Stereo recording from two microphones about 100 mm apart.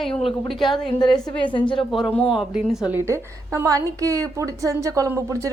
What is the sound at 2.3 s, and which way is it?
Speech, 5° right (ahead or behind).